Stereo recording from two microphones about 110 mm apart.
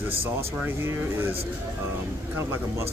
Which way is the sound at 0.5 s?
20° right (ahead or behind).